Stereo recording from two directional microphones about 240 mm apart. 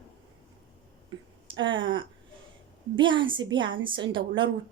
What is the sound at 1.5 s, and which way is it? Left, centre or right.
Speech, right.